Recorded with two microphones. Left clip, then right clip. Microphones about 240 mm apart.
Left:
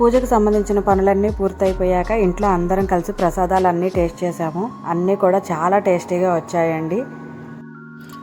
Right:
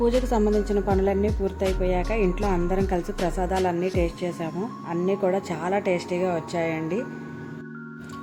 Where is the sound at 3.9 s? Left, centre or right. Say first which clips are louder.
Left 7 dB; centre.